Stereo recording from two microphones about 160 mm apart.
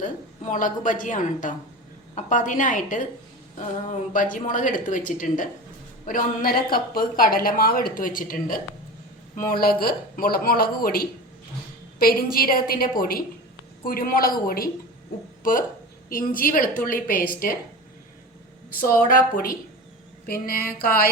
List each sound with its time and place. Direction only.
0.0 s a woman's voice: 55° left (ahead or behind)
4.1 s a woman's voice: 55° left (ahead or behind)
16.0 s a woman's voice: 60° left (ahead or behind)
18.9 s a woman's voice: 60° left (ahead or behind)